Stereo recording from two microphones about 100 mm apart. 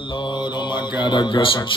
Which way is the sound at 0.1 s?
50° left (ahead or behind).